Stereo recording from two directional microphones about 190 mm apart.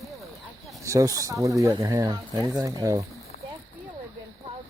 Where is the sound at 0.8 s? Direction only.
15° right (ahead or behind).